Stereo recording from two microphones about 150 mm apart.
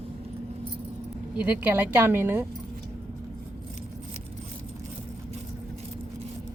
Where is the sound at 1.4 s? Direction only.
10° right (ahead or behind).